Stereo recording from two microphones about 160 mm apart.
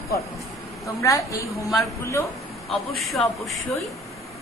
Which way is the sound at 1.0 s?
20° left (ahead or behind).